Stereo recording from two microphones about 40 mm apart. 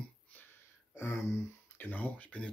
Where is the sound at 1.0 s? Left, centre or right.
Left.